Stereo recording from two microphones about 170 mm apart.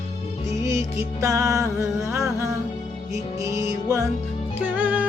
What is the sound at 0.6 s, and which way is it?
Music, 20° right (ahead or behind).